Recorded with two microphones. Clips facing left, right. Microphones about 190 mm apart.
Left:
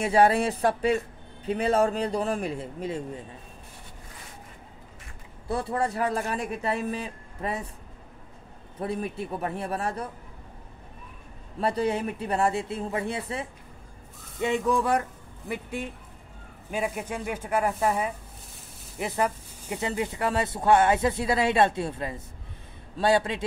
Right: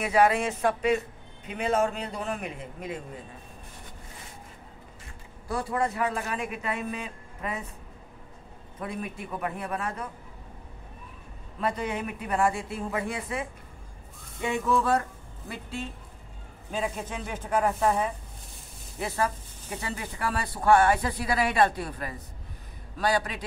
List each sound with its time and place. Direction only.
0.0 s speech: 30° left (ahead or behind)
5.5 s speech: 30° left (ahead or behind)
8.7 s speech: 35° left (ahead or behind)
11.6 s speech: 35° left (ahead or behind)
14.4 s speech: 15° left (ahead or behind)
18.9 s speech: 15° left (ahead or behind)